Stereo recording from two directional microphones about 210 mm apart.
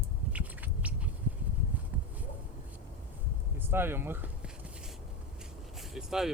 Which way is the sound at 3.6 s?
10° right (ahead or behind).